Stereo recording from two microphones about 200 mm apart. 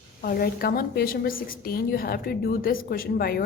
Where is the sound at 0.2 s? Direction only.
50° left (ahead or behind).